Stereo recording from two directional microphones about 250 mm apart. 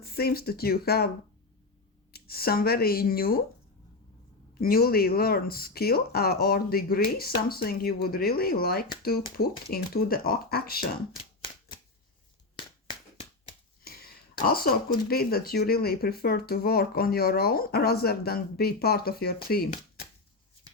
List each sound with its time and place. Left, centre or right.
0.0 s speech: left
2.1 s speech: left
4.6 s speech: left
13.8 s a sound: left
15.1 s speech: left